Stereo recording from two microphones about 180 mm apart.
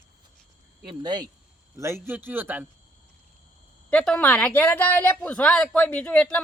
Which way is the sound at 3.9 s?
5° left (ahead or behind).